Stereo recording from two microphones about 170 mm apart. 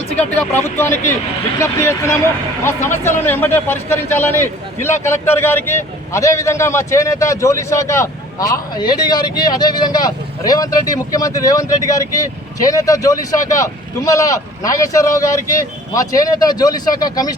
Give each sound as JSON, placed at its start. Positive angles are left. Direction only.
{"t": 0.2, "sound": "speech", "side_deg": 10}